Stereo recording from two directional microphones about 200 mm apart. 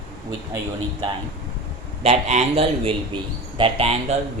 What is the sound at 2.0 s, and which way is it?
A man's voice, 35° right (ahead or behind).